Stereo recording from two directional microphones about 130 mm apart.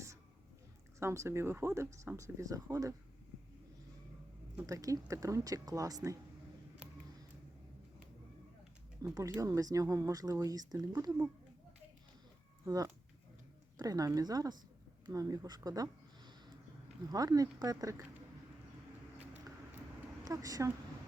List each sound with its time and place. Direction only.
0.9 s speech: 20° right (ahead or behind)
4.6 s speech: 25° right (ahead or behind)
9.0 s speech: 25° right (ahead or behind)
12.6 s speech: 25° right (ahead or behind)
19.3 s a sound: 15° right (ahead or behind)
20.2 s speech: 25° right (ahead or behind)